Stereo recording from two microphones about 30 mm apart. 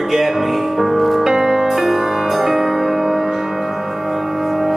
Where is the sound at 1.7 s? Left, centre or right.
Centre.